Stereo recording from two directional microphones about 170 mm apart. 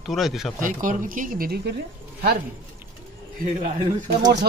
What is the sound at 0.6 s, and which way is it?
Speech, 50° right (ahead or behind).